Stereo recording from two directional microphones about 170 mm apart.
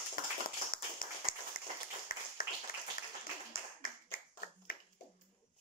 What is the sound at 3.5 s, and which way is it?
Clapping, 55° left (ahead or behind).